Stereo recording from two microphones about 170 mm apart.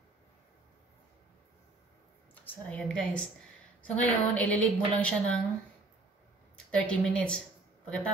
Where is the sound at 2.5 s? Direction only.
5° left (ahead or behind).